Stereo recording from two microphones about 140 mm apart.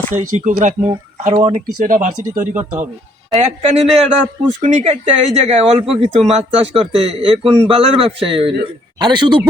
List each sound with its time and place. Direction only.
0.1 s speech: 65° right (ahead or behind)
2.6 s speech: 15° right (ahead or behind)
3.3 s a man's voice: 50° right (ahead or behind); by 9.4 s 30° right (ahead or behind)